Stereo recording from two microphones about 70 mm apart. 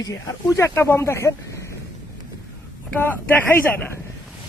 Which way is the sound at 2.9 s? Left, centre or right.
Left.